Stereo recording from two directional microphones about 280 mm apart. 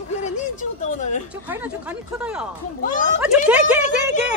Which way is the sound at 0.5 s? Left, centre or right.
Left.